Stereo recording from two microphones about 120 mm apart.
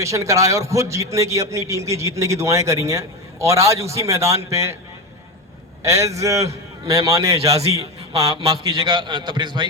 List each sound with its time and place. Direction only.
0.0 s a man's voice: 25° right (ahead or behind)
5.8 s a man's voice: 25° right (ahead or behind)
8.5 s a man's voice: 35° right (ahead or behind)